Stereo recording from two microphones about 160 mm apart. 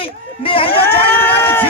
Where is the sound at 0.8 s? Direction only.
15° left (ahead or behind).